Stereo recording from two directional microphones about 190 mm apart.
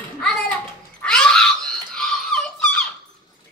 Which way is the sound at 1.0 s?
5° left (ahead or behind).